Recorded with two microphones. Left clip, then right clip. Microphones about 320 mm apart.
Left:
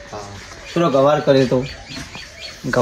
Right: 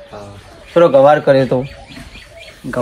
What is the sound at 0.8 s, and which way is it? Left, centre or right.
Speech, centre.